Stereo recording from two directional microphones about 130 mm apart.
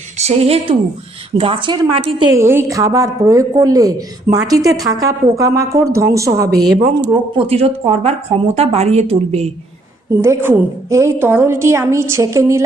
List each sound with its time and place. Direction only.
0.2 s a woman's voice: 55° right (ahead or behind)
2.3 s a woman's voice: 20° right (ahead or behind)
6.5 s speech: centre (ahead or behind)
7.0 s speech: 35° right (ahead or behind)
7.4 s a woman's voice: 50° right (ahead or behind)
10.2 s a woman's voice: 20° right (ahead or behind)